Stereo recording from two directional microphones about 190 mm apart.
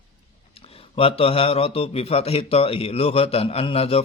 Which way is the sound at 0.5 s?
30° left (ahead or behind).